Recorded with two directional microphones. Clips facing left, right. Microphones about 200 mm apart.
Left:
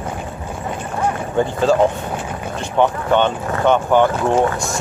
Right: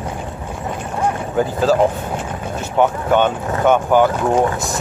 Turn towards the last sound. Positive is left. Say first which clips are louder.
# even
turn(degrees=-10)  # may be behind; listen again after turning